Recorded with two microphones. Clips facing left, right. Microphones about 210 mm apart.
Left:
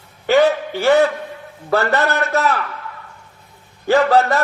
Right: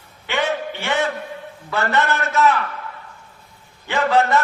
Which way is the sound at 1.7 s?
35° left (ahead or behind).